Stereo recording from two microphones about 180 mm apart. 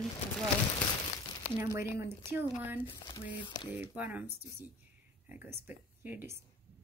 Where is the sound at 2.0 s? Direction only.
10° right (ahead or behind).